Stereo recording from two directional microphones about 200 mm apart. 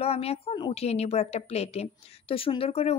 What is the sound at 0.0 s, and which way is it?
A woman's voice, 30° left (ahead or behind).